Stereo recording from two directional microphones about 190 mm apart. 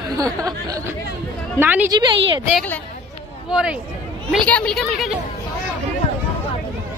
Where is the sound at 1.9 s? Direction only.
20° right (ahead or behind).